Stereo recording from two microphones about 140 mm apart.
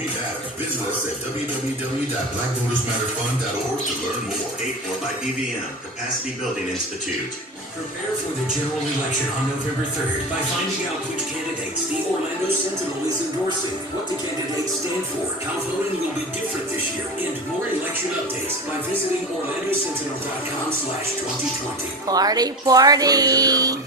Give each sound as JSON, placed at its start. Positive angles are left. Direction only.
{"t": 22.0, "sound": "speech", "side_deg": -25}